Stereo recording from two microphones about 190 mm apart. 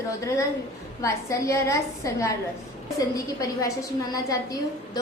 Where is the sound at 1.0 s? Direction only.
15° left (ahead or behind).